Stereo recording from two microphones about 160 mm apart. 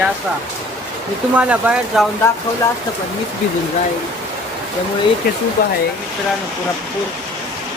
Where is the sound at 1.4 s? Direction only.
10° right (ahead or behind).